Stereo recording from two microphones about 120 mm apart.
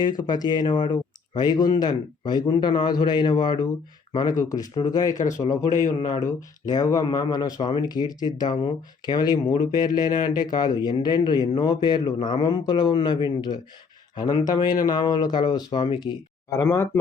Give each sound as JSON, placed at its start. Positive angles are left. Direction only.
{"t": 0.0, "sound": "speech", "side_deg": 35}
{"t": 16.5, "sound": "speech", "side_deg": 25}